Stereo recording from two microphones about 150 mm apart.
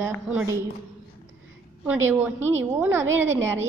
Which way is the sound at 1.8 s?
15° right (ahead or behind).